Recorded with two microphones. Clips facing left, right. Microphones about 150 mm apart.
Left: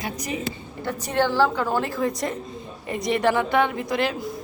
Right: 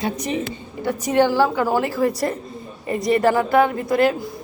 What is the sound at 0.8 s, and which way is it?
A woman's voice, 15° right (ahead or behind).